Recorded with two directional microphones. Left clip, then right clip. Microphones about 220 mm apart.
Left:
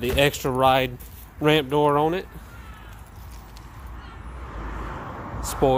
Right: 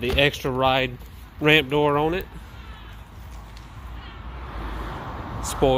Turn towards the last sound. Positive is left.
turn(degrees=-50)  # may be behind; listen again after turning